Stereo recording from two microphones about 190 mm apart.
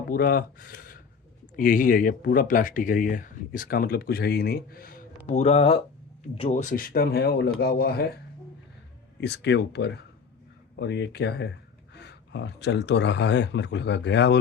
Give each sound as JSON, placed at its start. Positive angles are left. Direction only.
{"t": 0.1, "sound": "speech", "side_deg": 50}
{"t": 6.7, "sound": "speech", "side_deg": 50}
{"t": 9.2, "sound": "speech", "side_deg": 65}